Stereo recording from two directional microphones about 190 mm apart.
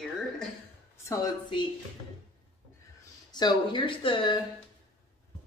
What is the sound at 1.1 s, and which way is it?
Speech, 20° left (ahead or behind).